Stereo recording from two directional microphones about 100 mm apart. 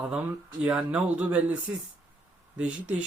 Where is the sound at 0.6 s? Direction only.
10° right (ahead or behind).